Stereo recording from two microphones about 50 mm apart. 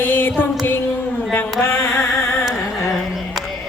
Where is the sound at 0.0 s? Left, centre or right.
Left.